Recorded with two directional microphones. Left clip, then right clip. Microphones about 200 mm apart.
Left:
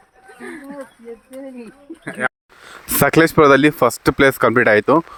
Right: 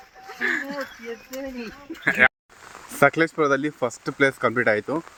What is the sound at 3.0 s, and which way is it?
Speech, 55° left (ahead or behind).